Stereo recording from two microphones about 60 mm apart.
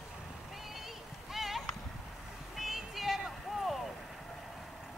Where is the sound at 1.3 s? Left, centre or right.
Centre.